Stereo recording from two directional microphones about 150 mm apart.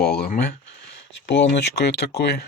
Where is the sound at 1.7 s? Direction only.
90° left.